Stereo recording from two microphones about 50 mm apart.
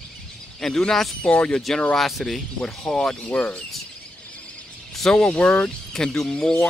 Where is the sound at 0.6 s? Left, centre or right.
Centre.